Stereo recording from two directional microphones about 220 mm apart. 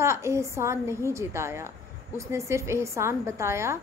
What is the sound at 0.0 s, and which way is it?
A woman's voice, 10° right (ahead or behind).